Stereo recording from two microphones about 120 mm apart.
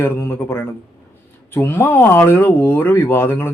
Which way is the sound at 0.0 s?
20° left (ahead or behind).